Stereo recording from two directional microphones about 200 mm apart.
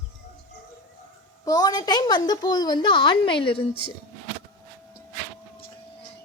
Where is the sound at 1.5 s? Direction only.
20° left (ahead or behind).